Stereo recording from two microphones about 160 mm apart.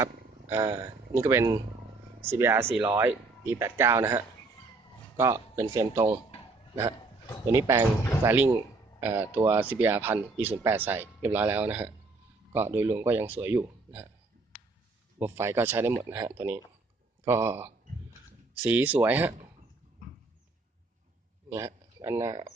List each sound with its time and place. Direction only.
0.0 s speech: 15° right (ahead or behind)
7.5 s speech: 15° right (ahead or behind)
15.2 s speech: 15° right (ahead or behind)
21.5 s speech: 20° right (ahead or behind)